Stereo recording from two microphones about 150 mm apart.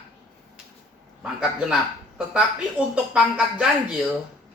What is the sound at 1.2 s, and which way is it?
A woman's voice, 5° right (ahead or behind).